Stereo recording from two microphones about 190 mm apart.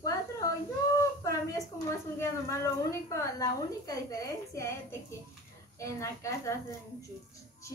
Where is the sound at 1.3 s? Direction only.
15° left (ahead or behind).